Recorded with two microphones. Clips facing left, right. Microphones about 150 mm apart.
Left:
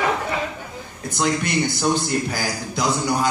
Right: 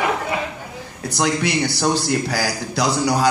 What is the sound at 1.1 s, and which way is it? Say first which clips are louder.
A man's voice: right 1 dB; 70° right (ahead or behind).